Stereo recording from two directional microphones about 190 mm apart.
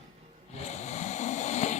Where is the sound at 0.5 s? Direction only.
35° left (ahead or behind).